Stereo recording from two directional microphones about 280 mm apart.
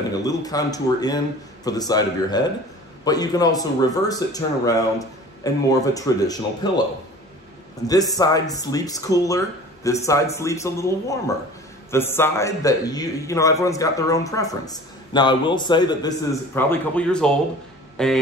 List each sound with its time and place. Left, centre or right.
0.2 s speech: centre
7.8 s speech: centre
17.9 s a sound: centre